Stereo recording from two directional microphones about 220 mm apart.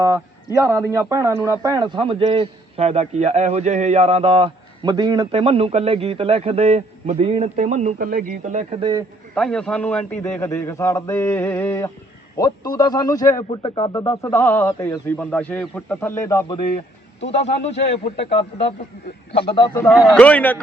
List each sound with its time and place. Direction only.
0.5 s a man's voice: 10° right (ahead or behind); by 8.9 s 30° right (ahead or behind)
9.3 s a man's voice: 5° left (ahead or behind); by 14.3 s 20° left (ahead or behind)
14.3 s a man's voice: 10° left (ahead or behind)
17.4 s speech: 30° left (ahead or behind)
19.5 s a man's voice: 10° left (ahead or behind)